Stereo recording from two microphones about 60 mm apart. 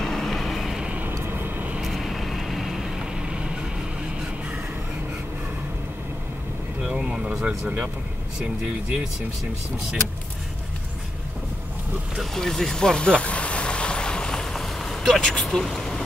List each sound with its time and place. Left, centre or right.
0.0 s vehicle: centre
0.7 s vehicle: centre
1.2 s vehicle: right
1.8 s vehicle: centre
6.8 s vehicle: centre
8.4 s speech: centre
12.2 s vehicle: centre
15.4 s speech: centre